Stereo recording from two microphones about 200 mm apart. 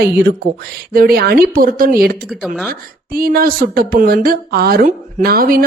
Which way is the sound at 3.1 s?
45° right (ahead or behind).